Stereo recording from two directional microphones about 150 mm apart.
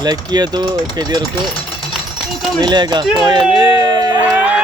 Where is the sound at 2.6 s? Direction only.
30° right (ahead or behind).